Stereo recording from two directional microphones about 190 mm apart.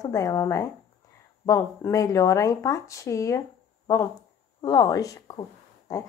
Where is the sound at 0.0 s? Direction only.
20° left (ahead or behind).